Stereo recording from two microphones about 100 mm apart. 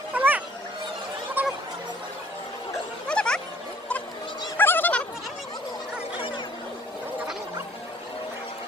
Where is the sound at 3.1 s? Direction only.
10° left (ahead or behind).